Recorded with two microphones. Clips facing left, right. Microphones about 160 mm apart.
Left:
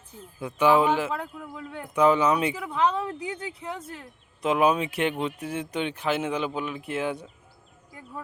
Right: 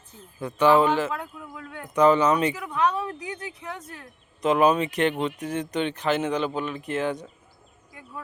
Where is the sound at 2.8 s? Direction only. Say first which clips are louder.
Even; 30° left (ahead or behind).